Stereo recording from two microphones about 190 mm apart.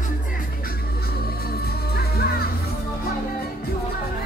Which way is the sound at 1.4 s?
55° left (ahead or behind).